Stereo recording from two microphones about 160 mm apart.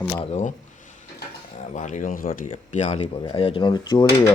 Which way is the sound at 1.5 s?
50° left (ahead or behind).